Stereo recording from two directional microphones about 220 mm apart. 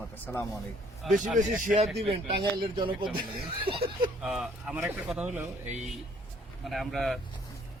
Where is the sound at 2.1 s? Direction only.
20° right (ahead or behind).